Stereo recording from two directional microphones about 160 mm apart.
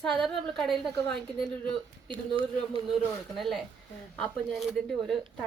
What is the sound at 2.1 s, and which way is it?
Speech, 35° right (ahead or behind).